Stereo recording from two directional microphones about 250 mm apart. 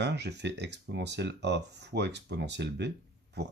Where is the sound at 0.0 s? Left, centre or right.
Right.